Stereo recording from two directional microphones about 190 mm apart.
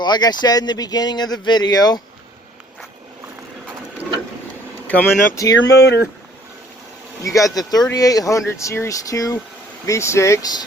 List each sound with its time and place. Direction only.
0.0 s speech: 20° left (ahead or behind)
4.9 s speech: 15° left (ahead or behind)
5.7 s speech: 60° left (ahead or behind)
7.2 s speech: 15° left (ahead or behind)